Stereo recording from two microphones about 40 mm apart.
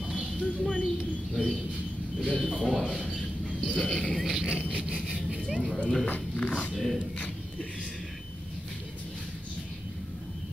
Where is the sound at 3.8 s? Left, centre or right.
Left.